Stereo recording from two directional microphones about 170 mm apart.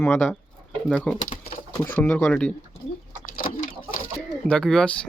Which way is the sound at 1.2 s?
30° left (ahead or behind).